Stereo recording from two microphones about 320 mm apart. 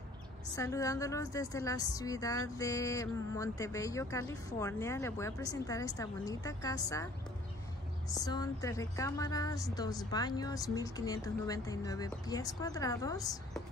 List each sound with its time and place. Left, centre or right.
0.6 s speech: centre
8.1 s speech: centre